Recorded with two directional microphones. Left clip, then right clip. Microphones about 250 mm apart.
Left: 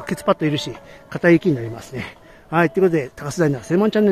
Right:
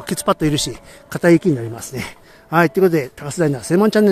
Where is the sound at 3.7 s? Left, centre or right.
Centre.